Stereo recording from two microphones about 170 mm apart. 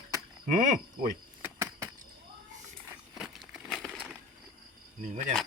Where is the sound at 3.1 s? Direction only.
Centre (ahead or behind).